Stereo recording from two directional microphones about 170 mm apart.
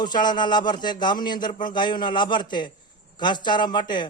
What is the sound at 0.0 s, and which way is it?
Speech, 25° left (ahead or behind).